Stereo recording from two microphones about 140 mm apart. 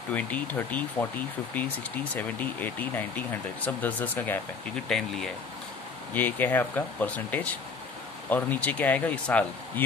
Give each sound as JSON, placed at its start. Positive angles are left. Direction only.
{"t": 0.1, "sound": "speech", "side_deg": 10}